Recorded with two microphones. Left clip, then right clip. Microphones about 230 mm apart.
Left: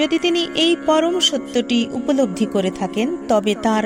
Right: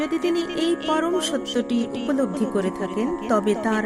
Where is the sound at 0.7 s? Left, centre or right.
Centre.